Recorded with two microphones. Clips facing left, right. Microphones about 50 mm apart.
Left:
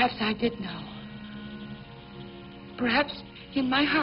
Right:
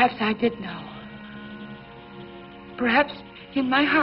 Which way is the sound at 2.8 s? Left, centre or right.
Centre.